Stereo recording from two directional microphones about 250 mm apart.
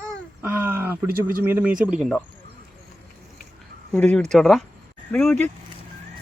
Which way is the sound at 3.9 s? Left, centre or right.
Centre.